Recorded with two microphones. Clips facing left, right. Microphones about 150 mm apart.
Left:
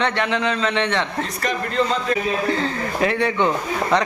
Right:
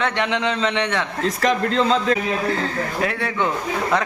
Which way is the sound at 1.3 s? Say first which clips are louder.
Right 5 dB; 90° right.